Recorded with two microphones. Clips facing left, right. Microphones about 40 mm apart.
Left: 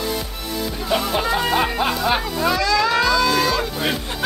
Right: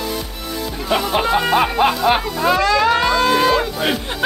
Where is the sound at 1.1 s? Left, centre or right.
Right.